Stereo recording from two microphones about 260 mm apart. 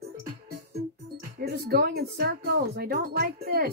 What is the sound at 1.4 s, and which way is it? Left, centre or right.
Speech, right.